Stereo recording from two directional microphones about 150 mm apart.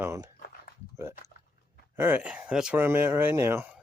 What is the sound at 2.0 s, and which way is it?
Speech, 15° right (ahead or behind).